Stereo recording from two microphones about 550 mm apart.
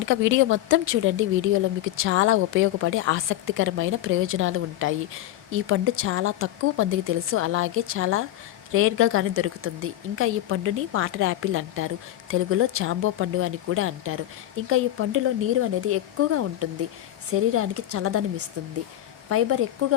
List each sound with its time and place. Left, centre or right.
0.0 s speech: right